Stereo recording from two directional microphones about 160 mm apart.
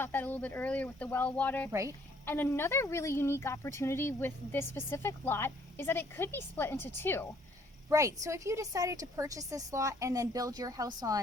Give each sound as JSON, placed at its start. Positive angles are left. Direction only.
{"t": 0.0, "sound": "a woman's voice", "side_deg": 10}
{"t": 1.7, "sound": "a woman's voice", "side_deg": -20}
{"t": 2.2, "sound": "a woman's voice", "side_deg": 15}
{"t": 7.9, "sound": "a woman's voice", "side_deg": -20}